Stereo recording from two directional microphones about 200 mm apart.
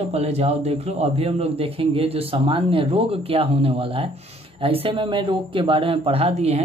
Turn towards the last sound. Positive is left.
turn(degrees=-30)  # may be behind; listen again after turning